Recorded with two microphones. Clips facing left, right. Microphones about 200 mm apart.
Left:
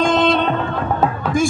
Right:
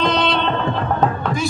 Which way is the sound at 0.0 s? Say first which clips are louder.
Left 3 dB; 45° left (ahead or behind).